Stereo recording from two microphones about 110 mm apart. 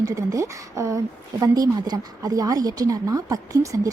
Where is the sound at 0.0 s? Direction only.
30° right (ahead or behind).